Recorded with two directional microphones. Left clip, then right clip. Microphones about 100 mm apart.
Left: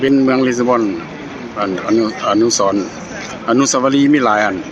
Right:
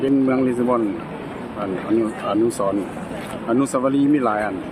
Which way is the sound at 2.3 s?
30° left (ahead or behind).